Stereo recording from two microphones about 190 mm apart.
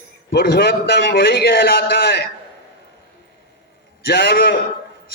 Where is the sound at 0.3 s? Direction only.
60° left (ahead or behind).